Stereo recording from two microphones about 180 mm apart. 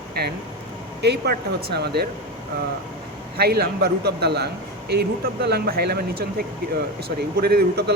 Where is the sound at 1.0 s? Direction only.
65° right (ahead or behind).